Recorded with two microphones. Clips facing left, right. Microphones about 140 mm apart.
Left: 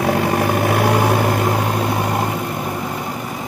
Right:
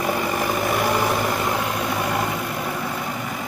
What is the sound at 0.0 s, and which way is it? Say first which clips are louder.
Vehicle: left 6 dB; 70° left (ahead or behind).